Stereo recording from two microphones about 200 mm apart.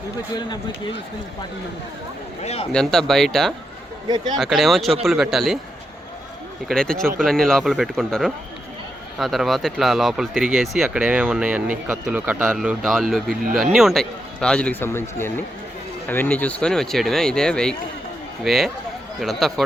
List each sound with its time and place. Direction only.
2.4 s a man's voice: 30° left (ahead or behind)
2.7 s speech: 5° left (ahead or behind)
6.7 s speech: 5° left (ahead or behind)